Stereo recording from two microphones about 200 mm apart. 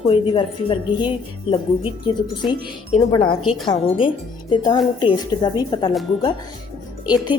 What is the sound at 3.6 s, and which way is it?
Speech, 25° left (ahead or behind).